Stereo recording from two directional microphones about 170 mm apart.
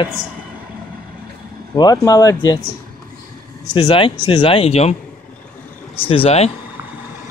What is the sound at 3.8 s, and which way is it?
Speech, 30° left (ahead or behind).